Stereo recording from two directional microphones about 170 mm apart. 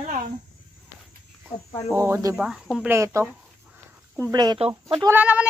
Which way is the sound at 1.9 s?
15° right (ahead or behind).